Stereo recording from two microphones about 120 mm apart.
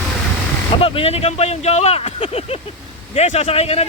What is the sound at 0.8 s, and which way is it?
Speech, 55° left (ahead or behind).